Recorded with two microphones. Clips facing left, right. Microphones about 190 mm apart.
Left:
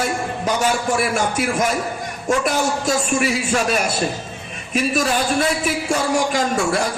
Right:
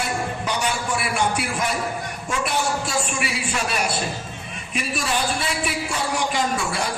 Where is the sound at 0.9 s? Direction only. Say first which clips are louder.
Left 4 dB; 45° left (ahead or behind).